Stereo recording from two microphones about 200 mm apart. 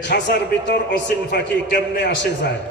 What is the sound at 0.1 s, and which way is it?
A man's voice, 60° left (ahead or behind).